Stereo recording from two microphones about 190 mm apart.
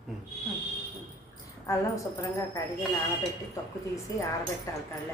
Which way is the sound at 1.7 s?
15° left (ahead or behind).